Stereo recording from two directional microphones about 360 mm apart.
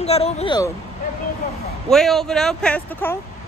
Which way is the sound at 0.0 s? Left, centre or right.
Centre.